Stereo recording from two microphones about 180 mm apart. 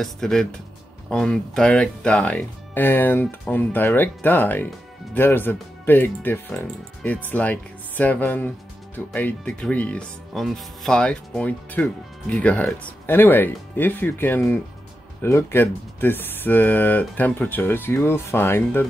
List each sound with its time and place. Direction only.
0.0 s speech: 5° left (ahead or behind)